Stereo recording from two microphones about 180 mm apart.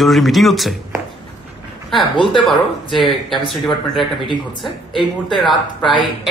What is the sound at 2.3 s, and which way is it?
A woman's voice, centre (ahead or behind).